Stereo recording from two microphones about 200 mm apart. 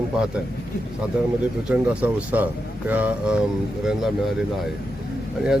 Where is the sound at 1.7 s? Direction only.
5° right (ahead or behind).